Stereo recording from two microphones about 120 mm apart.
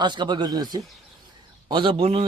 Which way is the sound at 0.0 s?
40° right (ahead or behind).